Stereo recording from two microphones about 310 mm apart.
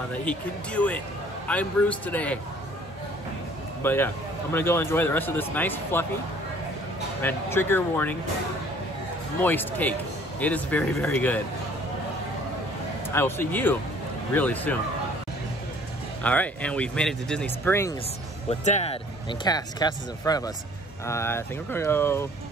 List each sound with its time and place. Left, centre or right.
0.1 s speech: centre
3.8 s speech: centre
7.2 s speech: centre
9.4 s speech: centre
13.1 s speech: centre
16.2 s speech: centre
18.5 s speech: left